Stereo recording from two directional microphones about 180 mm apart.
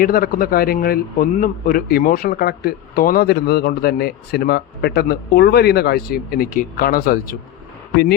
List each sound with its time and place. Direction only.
0.0 s speech: 55° left (ahead or behind)